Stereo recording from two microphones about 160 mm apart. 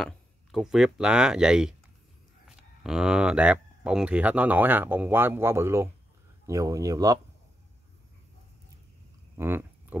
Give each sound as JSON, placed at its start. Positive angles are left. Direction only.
{"t": 0.0, "sound": "speech", "side_deg": 0}
{"t": 2.8, "sound": "speech", "side_deg": -5}
{"t": 9.4, "sound": "a sound", "side_deg": -15}